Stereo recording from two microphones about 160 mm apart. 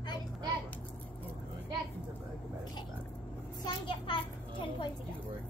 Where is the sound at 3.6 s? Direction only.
30° left (ahead or behind).